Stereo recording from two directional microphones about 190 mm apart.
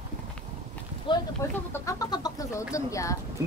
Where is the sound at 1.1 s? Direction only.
25° left (ahead or behind).